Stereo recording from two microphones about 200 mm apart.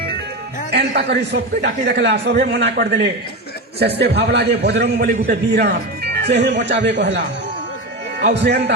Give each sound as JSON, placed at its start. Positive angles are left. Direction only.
{"t": 0.7, "sound": "a man's voice", "side_deg": -55}
{"t": 8.2, "sound": "a man's voice", "side_deg": -55}